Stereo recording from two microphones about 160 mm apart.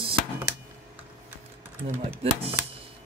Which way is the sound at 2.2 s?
35° right (ahead or behind).